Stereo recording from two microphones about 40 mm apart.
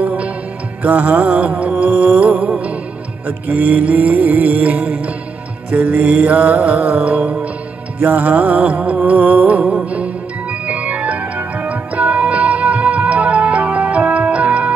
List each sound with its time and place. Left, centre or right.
0.0 s music: right
3.3 s music: right